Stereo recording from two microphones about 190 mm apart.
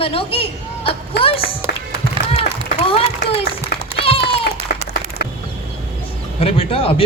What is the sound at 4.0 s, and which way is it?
Run, 30° left (ahead or behind).